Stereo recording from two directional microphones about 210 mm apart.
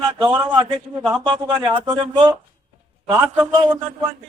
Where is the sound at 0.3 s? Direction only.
20° right (ahead or behind).